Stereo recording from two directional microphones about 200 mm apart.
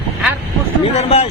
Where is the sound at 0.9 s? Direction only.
30° left (ahead or behind).